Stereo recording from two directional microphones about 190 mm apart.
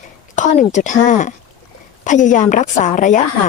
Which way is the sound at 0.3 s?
40° left (ahead or behind).